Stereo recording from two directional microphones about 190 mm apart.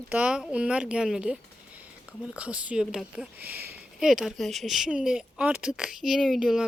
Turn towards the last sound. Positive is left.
turn(degrees=0)  # may be behind; listen again after turning